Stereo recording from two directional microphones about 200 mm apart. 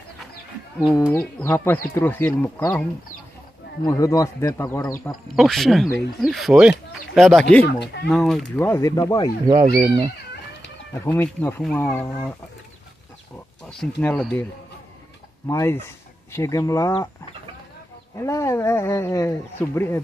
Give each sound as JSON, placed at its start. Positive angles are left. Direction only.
{"t": 1.1, "sound": "speech", "side_deg": 10}
{"t": 3.8, "sound": "speech", "side_deg": 15}
{"t": 5.3, "sound": "speech", "side_deg": 0}
{"t": 7.6, "sound": "speech", "side_deg": 55}
{"t": 8.1, "sound": "speech", "side_deg": 0}
{"t": 9.8, "sound": "speech", "side_deg": -25}
{"t": 11.0, "sound": "speech", "side_deg": 10}
{"t": 13.7, "sound": "speech", "side_deg": 5}
{"t": 18.1, "sound": "speech", "side_deg": 15}